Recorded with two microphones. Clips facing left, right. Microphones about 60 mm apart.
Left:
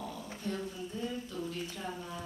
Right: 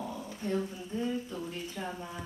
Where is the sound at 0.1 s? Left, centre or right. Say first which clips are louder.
Right 4 dB; right.